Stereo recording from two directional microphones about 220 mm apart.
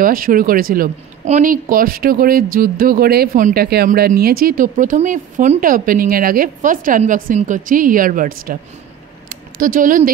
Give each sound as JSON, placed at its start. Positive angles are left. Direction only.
{"t": 0.0, "sound": "speech", "side_deg": -40}
{"t": 9.6, "sound": "speech", "side_deg": -40}